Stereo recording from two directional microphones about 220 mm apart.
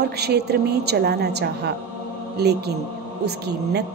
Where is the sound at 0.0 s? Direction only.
50° right (ahead or behind).